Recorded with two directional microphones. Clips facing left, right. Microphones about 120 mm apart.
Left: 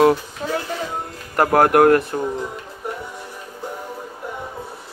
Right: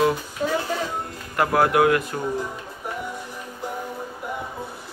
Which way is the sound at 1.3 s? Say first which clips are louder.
Left 5 dB; 50° left (ahead or behind).